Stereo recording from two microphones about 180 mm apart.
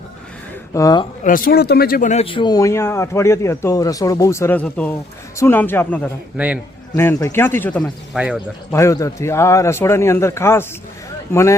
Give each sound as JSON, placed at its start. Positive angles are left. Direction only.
{"t": 0.7, "sound": "speech", "side_deg": 20}
{"t": 1.2, "sound": "speech", "side_deg": 50}
{"t": 2.2, "sound": "speech", "side_deg": 25}
{"t": 6.3, "sound": "a man's voice", "side_deg": -5}
{"t": 6.9, "sound": "speech", "side_deg": 15}
{"t": 8.1, "sound": "a man's voice", "side_deg": -5}
{"t": 8.7, "sound": "speech", "side_deg": 15}